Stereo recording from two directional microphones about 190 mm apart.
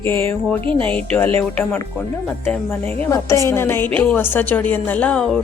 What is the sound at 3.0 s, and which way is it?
A woman's voice, 15° left (ahead or behind).